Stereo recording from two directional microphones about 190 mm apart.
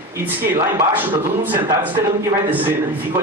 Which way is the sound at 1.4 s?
10° right (ahead or behind).